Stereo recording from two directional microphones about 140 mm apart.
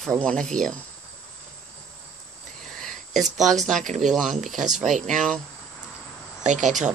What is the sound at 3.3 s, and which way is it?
Speech, centre (ahead or behind).